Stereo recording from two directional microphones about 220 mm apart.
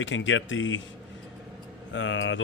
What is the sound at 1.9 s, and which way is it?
Speech, 60° left (ahead or behind).